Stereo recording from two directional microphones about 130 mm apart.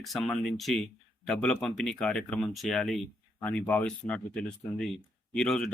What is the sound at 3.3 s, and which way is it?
Speech, 10° left (ahead or behind).